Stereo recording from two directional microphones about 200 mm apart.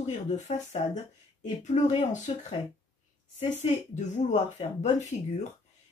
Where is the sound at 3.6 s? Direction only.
35° left (ahead or behind).